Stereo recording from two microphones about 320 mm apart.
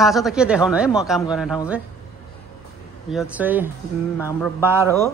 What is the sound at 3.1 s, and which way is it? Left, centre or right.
A man's voice, centre.